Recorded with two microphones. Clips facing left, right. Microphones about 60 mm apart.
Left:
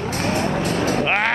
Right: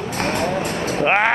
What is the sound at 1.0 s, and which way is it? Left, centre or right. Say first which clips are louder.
Speech: right 3 dB; centre.